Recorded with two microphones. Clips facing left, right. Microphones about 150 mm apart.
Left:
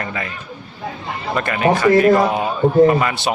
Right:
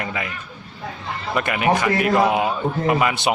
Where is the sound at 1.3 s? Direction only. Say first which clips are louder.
Left 2 dB; 10° right (ahead or behind).